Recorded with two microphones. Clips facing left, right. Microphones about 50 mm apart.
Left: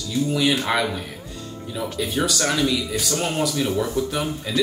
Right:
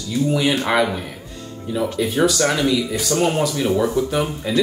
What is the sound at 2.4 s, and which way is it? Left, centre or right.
Speech, right.